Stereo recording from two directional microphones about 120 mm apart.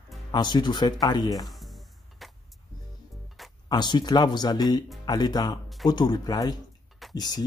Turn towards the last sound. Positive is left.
turn(degrees=35)  # may be behind; listen again after turning